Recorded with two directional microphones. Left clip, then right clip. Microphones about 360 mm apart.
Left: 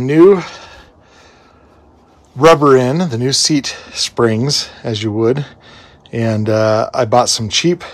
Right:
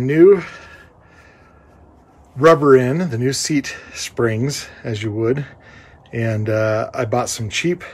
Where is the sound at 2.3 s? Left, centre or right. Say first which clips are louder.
Left 3 dB; centre.